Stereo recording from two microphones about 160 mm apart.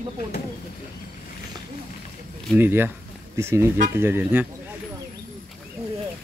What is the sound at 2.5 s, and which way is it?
Speech, 15° right (ahead or behind).